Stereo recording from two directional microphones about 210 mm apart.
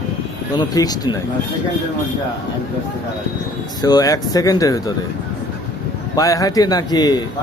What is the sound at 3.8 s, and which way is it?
A man's voice, 20° left (ahead or behind).